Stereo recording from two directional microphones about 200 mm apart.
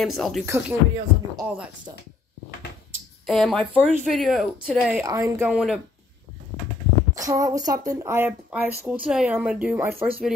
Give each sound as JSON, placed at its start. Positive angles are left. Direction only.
{"t": 0.0, "sound": "speech", "side_deg": 0}
{"t": 0.5, "sound": "speech", "side_deg": -15}
{"t": 3.3, "sound": "speech", "side_deg": 0}
{"t": 5.0, "sound": "speech", "side_deg": -15}
{"t": 5.5, "sound": "speech", "side_deg": -5}
{"t": 7.2, "sound": "speech", "side_deg": -15}